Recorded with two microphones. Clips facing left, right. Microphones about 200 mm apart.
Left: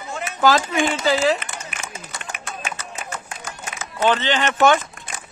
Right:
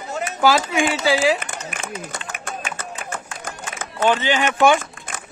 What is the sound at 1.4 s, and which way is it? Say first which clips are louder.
Run: right 3 dB; 50° right (ahead or behind).